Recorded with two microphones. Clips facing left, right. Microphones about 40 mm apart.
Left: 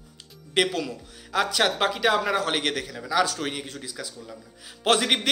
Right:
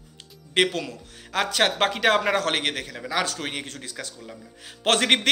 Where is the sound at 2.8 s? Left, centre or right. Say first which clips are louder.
Left 3 dB; right.